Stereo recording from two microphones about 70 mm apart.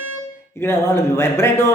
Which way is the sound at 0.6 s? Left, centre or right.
Left.